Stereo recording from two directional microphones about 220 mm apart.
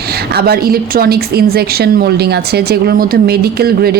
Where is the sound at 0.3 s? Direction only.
45° right (ahead or behind).